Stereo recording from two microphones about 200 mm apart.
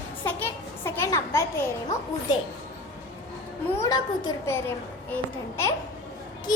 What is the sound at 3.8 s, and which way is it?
A child's voice, 20° left (ahead or behind).